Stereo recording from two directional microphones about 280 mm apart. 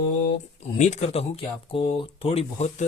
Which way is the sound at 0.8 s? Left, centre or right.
Left.